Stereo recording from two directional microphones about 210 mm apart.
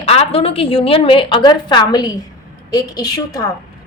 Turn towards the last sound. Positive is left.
turn(degrees=15)  # may be behind; listen again after turning